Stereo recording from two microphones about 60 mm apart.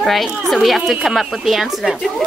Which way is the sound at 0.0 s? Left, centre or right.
Centre.